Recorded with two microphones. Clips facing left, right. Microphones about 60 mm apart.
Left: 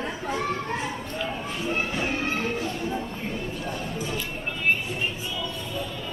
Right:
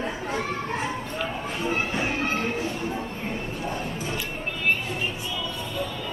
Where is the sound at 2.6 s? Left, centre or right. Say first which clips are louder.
Even; right.